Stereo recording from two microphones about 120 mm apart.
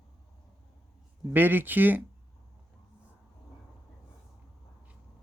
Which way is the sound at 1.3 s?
15° right (ahead or behind).